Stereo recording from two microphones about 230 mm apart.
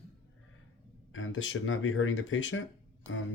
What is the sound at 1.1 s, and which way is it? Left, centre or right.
Speech, left.